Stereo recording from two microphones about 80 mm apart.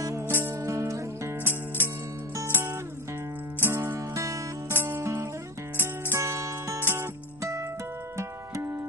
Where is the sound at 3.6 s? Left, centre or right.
Right.